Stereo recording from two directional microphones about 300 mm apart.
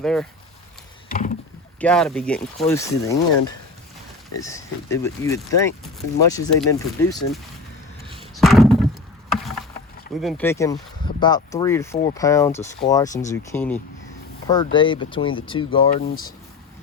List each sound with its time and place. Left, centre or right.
0.0 s speech: centre
1.8 s speech: centre
4.4 s speech: centre
8.0 s a sound: centre
8.4 s a sound: centre
9.3 s rowboat: centre
10.2 s speech: centre
15.9 s speech: left